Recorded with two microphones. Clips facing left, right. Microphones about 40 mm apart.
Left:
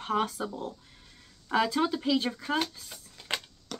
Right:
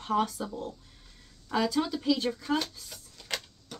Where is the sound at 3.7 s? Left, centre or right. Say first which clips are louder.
Left 5 dB; left.